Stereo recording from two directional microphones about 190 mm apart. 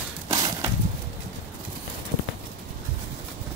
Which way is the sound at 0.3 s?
20° right (ahead or behind).